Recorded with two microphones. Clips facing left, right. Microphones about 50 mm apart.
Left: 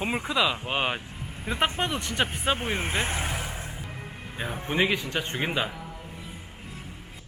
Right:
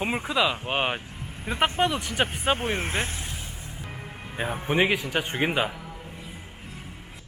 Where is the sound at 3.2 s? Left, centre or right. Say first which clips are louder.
Left 6 dB; left.